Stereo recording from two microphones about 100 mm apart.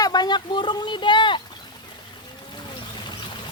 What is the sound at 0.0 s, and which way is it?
Speech, 45° left (ahead or behind).